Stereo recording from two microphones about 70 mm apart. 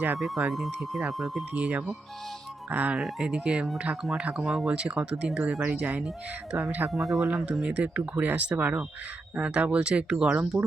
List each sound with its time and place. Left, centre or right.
0.2 s speech: centre
1.5 s speech: centre
3.0 s speech: centre; by 6.9 s right
6.9 s speech: centre
7.6 s speech: right